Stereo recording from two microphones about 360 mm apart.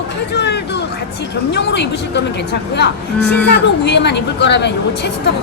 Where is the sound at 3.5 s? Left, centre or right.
Left.